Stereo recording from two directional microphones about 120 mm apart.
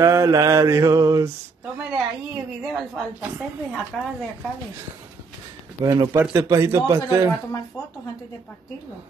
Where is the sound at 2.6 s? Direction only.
Centre (ahead or behind).